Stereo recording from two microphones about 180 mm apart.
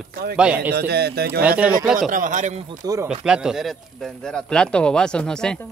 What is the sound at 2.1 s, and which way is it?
Speech, 45° right (ahead or behind).